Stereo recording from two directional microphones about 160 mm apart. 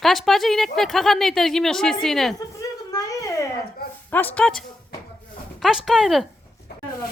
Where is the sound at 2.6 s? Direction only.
20° left (ahead or behind).